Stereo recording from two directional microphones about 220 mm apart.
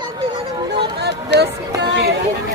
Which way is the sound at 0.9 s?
50° right (ahead or behind).